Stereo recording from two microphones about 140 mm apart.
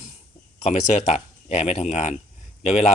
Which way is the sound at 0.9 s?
55° left (ahead or behind).